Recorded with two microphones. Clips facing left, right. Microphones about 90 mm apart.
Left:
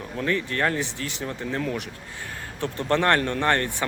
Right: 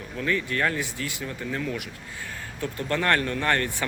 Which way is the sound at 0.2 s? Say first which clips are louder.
Left 1 dB; 35° left (ahead or behind).